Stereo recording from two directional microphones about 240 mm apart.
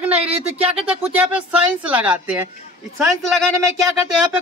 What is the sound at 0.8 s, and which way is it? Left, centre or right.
Speech, centre.